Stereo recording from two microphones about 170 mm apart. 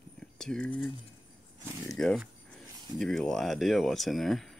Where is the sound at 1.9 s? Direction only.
Centre (ahead or behind).